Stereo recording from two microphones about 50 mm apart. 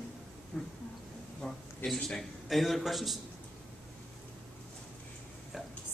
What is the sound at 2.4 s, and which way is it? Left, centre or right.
Speech, centre.